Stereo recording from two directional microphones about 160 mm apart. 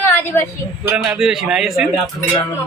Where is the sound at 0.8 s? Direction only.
5° right (ahead or behind).